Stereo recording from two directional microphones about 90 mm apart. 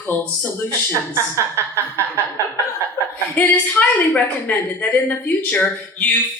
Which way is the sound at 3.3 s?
20° left (ahead or behind).